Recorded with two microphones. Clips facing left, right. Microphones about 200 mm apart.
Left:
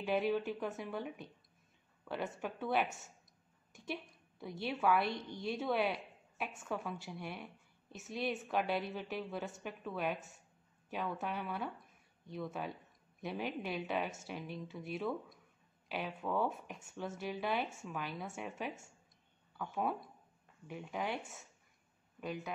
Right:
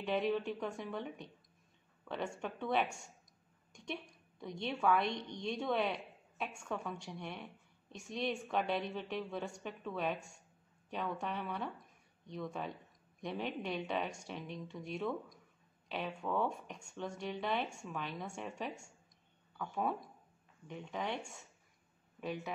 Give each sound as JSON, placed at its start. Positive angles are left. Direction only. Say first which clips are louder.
{"t": 0.0, "sound": "a woman's voice", "louder": "left 1 dB", "side_deg": 5}
{"t": 22.2, "sound": "a woman's voice", "louder": "right 1 dB", "side_deg": 0}